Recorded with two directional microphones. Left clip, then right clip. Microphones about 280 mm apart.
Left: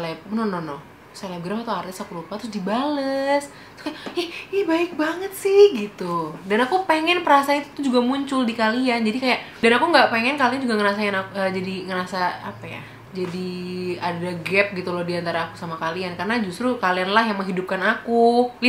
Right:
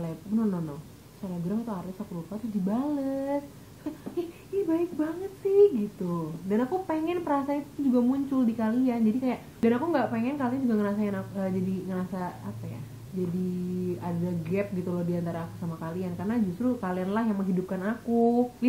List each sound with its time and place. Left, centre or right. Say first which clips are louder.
0.0 s a woman's voice: left 6 dB; centre
14.0 s a woman's voice: left 9 dB; centre
18.2 s speech: left 9 dB; left